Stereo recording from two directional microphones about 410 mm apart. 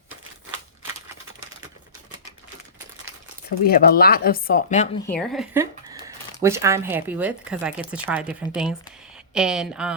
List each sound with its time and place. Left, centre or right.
3.7 s speech: left
5.0 s speech: centre